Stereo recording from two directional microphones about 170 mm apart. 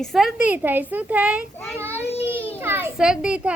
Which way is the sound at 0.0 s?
Centre (ahead or behind).